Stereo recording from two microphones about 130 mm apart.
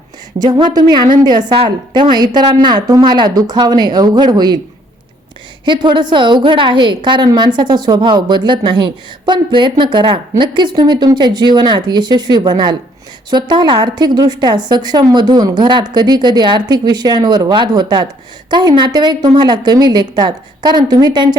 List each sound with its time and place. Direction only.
0.3 s a woman's voice: 30° right (ahead or behind)
5.6 s a woman's voice: 35° right (ahead or behind)